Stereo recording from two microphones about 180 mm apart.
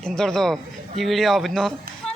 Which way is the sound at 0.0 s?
5° left (ahead or behind).